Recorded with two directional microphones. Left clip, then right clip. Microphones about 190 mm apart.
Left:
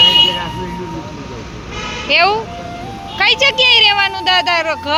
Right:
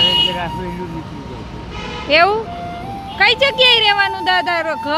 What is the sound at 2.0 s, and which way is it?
Speech, 30° right (ahead or behind).